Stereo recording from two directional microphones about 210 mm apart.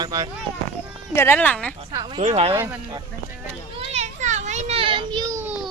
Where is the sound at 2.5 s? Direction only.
10° right (ahead or behind).